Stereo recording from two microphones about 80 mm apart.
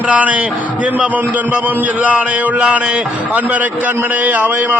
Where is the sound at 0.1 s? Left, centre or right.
Centre.